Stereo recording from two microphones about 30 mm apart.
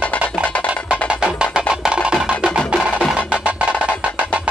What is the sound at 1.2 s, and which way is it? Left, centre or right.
Music, right.